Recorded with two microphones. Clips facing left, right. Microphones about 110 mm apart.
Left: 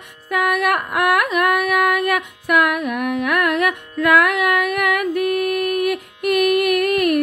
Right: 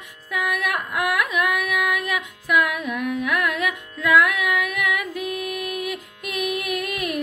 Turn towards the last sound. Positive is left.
turn(degrees=60)  # may be behind; listen again after turning